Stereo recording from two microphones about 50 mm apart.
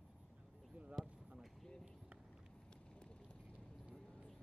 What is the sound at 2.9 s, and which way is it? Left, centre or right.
Vehicle, left.